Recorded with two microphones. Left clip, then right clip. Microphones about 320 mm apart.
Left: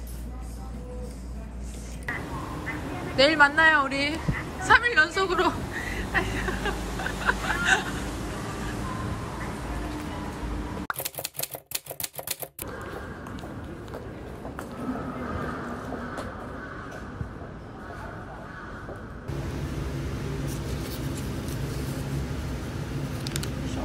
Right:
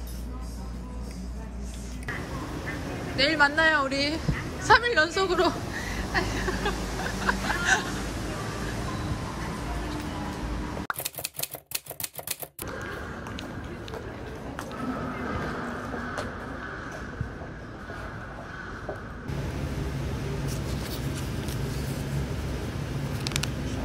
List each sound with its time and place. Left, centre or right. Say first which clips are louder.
3.2 s speech: left 3 dB; centre
7.2 s vehicle: left 1 dB; centre
23.2 s a sound: right 5 dB; centre